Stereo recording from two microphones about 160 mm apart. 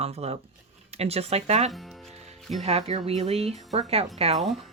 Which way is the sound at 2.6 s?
40° right (ahead or behind).